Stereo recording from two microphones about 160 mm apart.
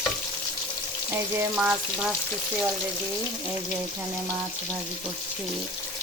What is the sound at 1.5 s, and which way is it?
Frying, 5° right (ahead or behind).